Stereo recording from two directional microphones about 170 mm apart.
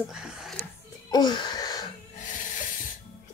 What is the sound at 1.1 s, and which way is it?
Wheeze, 25° left (ahead or behind).